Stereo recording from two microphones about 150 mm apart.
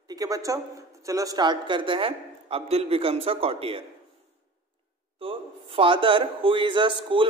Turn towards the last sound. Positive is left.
turn(degrees=-35)  # may be behind; listen again after turning